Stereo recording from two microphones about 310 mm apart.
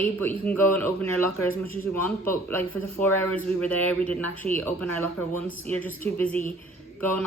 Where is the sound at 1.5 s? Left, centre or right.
Left.